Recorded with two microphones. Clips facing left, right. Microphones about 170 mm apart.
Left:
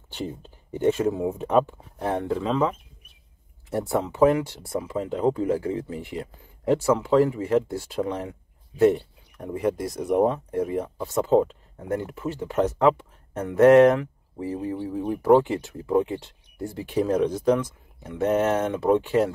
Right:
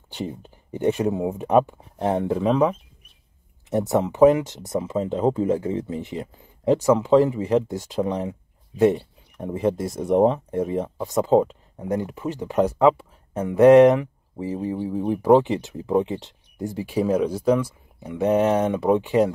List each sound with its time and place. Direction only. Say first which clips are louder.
0.1 s speech: right 2 dB; 15° right (ahead or behind)
3.7 s speech: right 4 dB; 20° right (ahead or behind)